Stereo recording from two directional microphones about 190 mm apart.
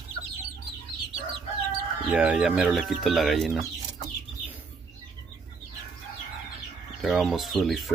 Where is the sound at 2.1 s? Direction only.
5° right (ahead or behind).